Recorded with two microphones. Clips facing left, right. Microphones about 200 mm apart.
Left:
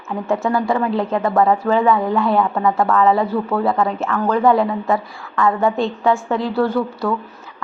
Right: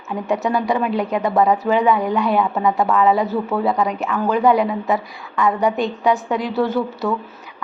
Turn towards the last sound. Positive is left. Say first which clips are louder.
# left 1 dB
turn(degrees=-20)  # may be behind; listen again after turning